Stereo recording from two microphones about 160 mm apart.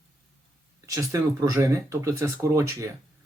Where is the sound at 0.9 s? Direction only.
20° right (ahead or behind).